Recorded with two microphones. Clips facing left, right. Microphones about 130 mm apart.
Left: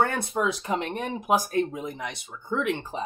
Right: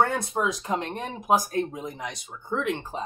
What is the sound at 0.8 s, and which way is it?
Speech, 10° left (ahead or behind).